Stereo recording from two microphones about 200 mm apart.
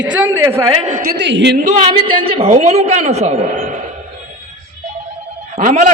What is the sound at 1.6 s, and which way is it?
A man's voice, 30° right (ahead or behind).